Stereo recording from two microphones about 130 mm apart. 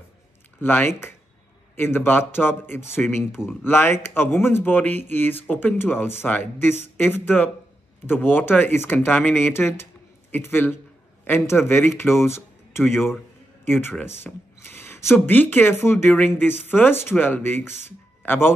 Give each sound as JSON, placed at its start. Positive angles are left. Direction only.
{"t": 0.6, "sound": "speech", "side_deg": 15}